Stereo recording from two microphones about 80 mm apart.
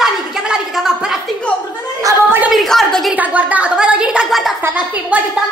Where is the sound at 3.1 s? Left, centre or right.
Centre.